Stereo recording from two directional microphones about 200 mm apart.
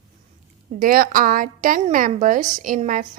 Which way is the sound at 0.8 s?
45° right (ahead or behind).